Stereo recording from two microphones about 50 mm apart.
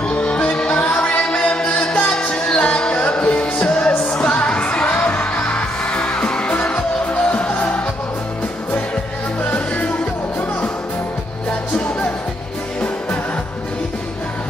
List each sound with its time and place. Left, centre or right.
0.1 s music: left
1.0 s a capella: left
1.8 s music: left
9.4 s music: left